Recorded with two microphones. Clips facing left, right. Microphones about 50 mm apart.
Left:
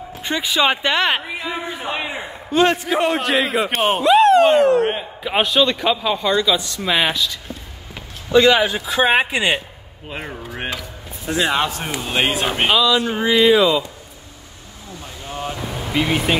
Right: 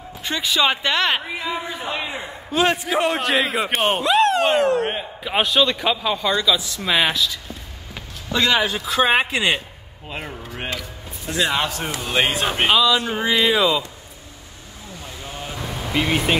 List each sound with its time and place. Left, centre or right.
0.2 s speech: left
2.5 s speech: centre
10.1 s a man's voice: left
12.1 s speech: centre
12.6 s speech: centre
15.9 s speech: centre